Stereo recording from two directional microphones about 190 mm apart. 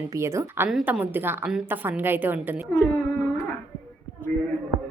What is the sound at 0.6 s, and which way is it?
A woman's voice, 5° right (ahead or behind).